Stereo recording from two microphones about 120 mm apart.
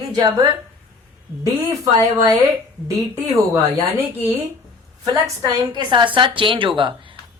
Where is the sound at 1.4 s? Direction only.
25° right (ahead or behind).